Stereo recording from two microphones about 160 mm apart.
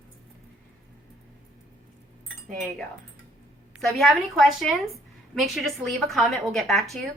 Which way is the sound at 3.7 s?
Centre (ahead or behind).